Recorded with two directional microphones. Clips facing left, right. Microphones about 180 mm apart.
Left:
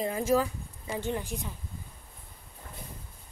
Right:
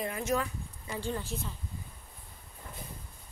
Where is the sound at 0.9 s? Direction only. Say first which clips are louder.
Left 3 dB; 20° left (ahead or behind).